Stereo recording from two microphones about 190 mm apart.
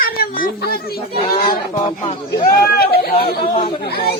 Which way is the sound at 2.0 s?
35° left (ahead or behind).